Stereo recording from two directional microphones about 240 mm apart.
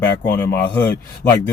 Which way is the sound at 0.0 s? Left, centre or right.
Centre.